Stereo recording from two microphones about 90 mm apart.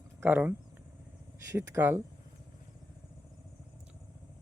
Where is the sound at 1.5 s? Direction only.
35° right (ahead or behind).